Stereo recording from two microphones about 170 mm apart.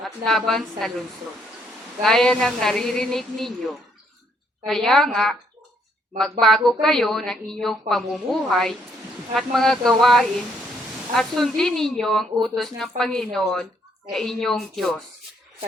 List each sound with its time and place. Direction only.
0.0 s speech: centre (ahead or behind)
4.6 s speech: centre (ahead or behind)
6.4 s speech: centre (ahead or behind)